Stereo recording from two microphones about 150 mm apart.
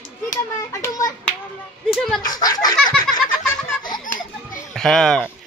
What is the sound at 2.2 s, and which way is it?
Speech, 25° left (ahead or behind).